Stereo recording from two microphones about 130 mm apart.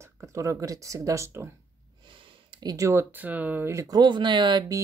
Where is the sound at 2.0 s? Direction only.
40° right (ahead or behind).